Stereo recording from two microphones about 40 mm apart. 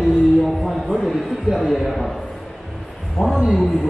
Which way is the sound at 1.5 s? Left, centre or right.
Centre.